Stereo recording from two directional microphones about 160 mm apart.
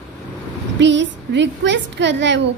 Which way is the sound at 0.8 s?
90° right.